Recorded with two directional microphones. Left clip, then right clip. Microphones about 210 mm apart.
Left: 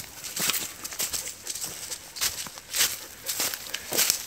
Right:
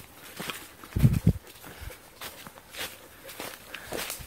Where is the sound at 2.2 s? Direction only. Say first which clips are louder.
Left 12 dB; 50° left (ahead or behind).